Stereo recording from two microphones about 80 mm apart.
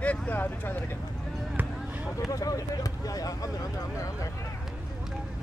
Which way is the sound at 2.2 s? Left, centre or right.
Left.